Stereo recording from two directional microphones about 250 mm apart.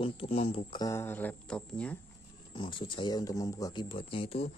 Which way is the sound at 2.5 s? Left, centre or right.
Left.